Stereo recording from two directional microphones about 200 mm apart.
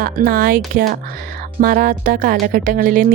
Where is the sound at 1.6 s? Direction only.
45° right (ahead or behind).